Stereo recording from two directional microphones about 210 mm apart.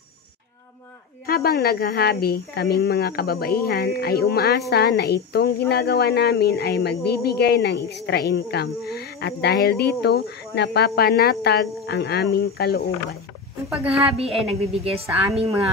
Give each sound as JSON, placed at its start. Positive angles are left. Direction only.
{"t": 1.2, "sound": "speech", "side_deg": 45}
{"t": 14.1, "sound": "a woman's voice", "side_deg": -30}